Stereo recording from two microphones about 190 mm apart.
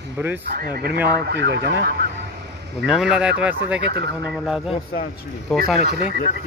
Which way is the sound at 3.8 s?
60° right (ahead or behind).